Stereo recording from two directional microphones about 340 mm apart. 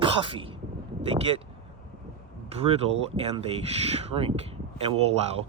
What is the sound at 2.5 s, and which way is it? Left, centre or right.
Speech, centre.